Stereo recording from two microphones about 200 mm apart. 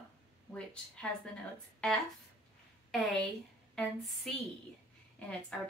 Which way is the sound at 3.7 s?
5° left (ahead or behind).